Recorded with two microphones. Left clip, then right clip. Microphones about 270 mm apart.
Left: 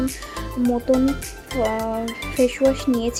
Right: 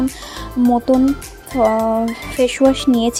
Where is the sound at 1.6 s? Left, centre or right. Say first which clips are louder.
Right 8 dB; right.